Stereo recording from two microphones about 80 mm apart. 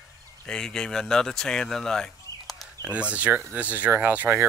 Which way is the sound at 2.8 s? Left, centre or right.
Centre.